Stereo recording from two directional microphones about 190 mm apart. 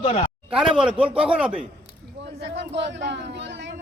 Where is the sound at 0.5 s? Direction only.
5° right (ahead or behind).